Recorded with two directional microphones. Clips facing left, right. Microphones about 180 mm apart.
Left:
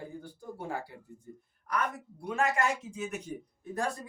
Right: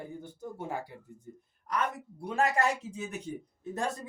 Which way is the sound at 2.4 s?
35° right (ahead or behind).